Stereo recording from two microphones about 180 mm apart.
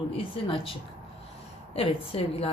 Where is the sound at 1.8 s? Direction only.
30° left (ahead or behind).